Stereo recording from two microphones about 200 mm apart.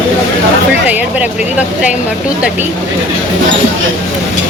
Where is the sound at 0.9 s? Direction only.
5° right (ahead or behind).